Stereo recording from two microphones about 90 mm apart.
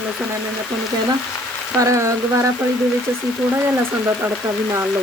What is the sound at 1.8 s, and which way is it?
Speech, 35° right (ahead or behind).